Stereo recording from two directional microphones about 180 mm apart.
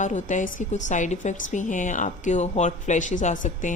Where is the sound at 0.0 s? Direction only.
45° left (ahead or behind).